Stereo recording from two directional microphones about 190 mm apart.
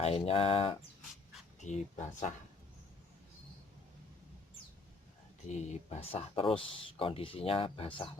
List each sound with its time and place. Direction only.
0.0 s speech: 30° left (ahead or behind)
5.5 s speech: 35° left (ahead or behind)